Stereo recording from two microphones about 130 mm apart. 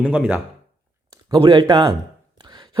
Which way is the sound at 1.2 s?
35° right (ahead or behind).